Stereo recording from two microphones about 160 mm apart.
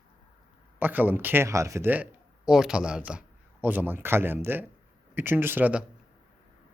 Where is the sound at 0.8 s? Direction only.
10° right (ahead or behind).